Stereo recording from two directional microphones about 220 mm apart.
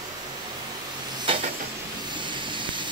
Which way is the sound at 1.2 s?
25° right (ahead or behind).